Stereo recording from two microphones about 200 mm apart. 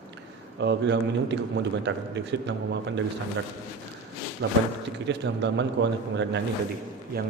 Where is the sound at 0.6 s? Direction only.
60° right (ahead or behind).